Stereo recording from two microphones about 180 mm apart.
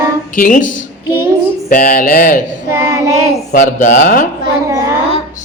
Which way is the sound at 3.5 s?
45° left (ahead or behind).